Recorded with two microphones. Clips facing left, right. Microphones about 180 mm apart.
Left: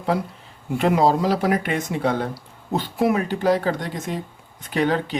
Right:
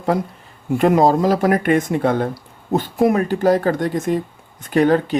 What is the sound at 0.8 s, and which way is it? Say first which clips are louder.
Speech: right 4 dB; 45° right (ahead or behind).